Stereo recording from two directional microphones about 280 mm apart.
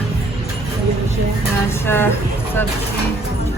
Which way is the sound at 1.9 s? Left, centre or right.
Centre.